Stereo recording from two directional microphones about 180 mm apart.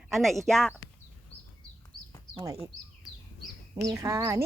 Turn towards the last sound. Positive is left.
turn(degrees=-15)  # may be behind; listen again after turning